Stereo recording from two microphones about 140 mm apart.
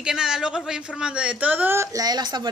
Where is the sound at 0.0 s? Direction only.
5° right (ahead or behind).